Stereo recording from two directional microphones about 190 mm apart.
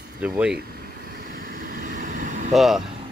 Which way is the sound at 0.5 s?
50° right (ahead or behind).